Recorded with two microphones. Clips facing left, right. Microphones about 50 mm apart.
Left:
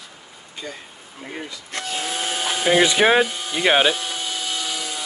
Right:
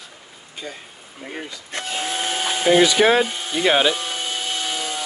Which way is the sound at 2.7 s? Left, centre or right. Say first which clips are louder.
Right 1 dB; left.